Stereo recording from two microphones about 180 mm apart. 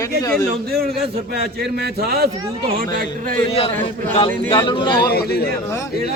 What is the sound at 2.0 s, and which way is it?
Speech, 60° right (ahead or behind).